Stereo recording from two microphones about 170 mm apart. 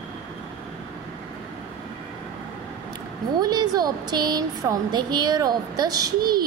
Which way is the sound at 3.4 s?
25° right (ahead or behind).